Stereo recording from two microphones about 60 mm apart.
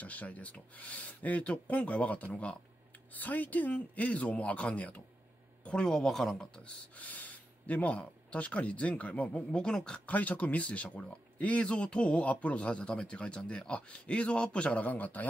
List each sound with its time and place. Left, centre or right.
0.0 s a man's voice: left; by 6.3 s centre
6.4 s speech: centre